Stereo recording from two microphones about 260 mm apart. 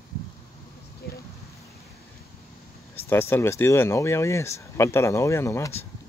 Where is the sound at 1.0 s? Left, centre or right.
Left.